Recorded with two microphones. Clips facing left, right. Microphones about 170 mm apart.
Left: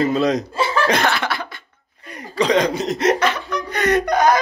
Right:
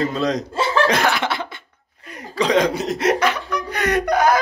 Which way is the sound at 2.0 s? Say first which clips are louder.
Left 2 dB; centre (ahead or behind).